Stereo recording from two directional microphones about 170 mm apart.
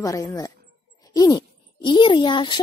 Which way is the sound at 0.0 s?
20° left (ahead or behind).